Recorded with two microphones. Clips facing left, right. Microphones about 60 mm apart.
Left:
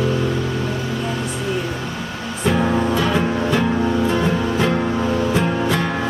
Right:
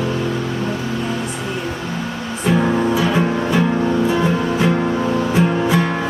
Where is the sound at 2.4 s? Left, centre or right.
Centre.